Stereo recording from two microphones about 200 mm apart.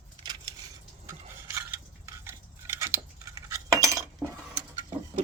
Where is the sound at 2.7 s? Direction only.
15° right (ahead or behind).